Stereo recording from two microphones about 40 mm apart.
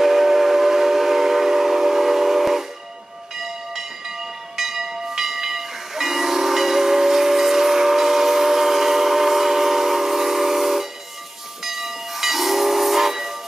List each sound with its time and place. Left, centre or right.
0.0 s train: centre
4.6 s hiss: centre